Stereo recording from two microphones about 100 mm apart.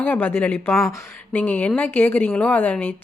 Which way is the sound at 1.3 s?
20° left (ahead or behind).